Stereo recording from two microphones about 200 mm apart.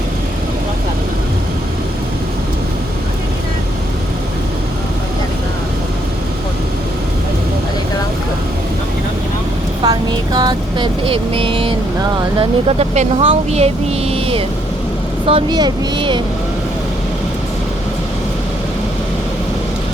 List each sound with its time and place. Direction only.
9.8 s vehicle: 20° right (ahead or behind)
12.4 s speech: 30° right (ahead or behind)
14.1 s a sound: 30° right (ahead or behind)
15.3 s speech: 25° right (ahead or behind)